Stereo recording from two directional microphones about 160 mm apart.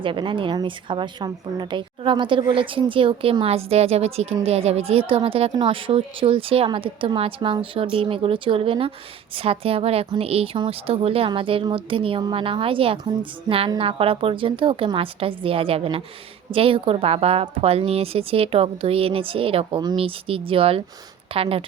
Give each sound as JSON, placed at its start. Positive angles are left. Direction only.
{"t": 0.0, "sound": "a woman's voice", "side_deg": -30}